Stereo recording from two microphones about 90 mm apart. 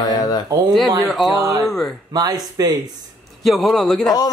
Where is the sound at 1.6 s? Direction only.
5° left (ahead or behind).